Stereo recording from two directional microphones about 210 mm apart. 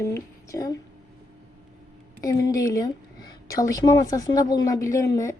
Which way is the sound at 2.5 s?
15° left (ahead or behind).